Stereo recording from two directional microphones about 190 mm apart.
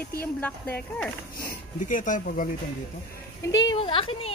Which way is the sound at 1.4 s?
45° left (ahead or behind).